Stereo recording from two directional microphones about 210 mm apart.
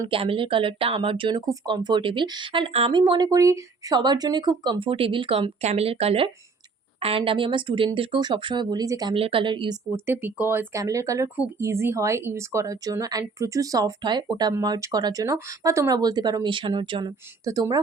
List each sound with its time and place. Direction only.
0.0 s speech: 25° right (ahead or behind)
9.9 s speech: 10° right (ahead or behind)